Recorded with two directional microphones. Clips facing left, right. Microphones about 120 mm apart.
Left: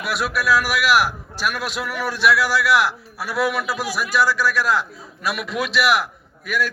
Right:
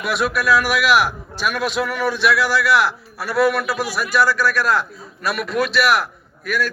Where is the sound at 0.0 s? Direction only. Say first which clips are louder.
Right 3 dB; 5° left (ahead or behind).